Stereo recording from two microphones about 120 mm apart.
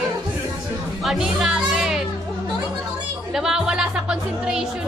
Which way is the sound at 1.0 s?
5° right (ahead or behind).